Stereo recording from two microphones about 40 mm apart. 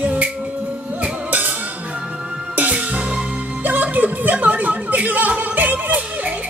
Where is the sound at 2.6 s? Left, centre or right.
Right.